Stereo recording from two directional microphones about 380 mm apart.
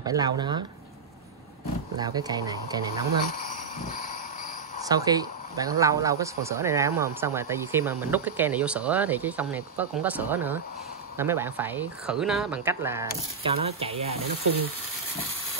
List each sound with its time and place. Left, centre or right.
0.0 s speech: centre
2.0 s speech: centre
4.8 s speech: centre